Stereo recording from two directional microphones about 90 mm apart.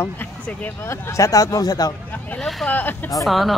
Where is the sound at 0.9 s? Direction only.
35° left (ahead or behind).